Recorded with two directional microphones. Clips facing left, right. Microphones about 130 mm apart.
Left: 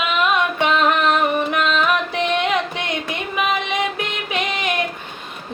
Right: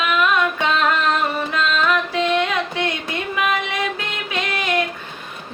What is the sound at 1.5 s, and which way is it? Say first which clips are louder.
Music: left 1 dB; 20° left (ahead or behind).